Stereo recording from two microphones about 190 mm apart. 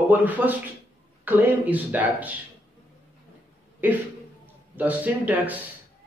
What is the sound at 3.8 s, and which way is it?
Speech, 10° right (ahead or behind).